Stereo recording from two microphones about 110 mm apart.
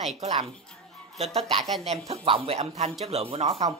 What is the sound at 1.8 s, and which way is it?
Speech, 75° right (ahead or behind).